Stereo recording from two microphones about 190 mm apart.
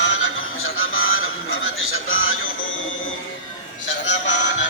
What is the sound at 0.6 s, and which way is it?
Music, 90° left.